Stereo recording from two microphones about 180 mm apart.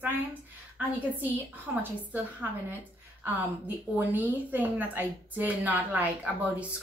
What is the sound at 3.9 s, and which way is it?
A woman's voice, 10° right (ahead or behind).